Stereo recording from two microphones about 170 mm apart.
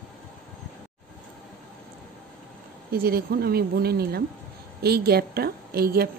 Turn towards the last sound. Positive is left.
turn(degrees=-60)  # may be behind; listen again after turning